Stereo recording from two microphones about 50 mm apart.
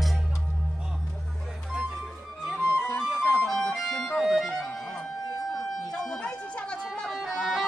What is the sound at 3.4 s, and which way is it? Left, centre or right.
Music, centre.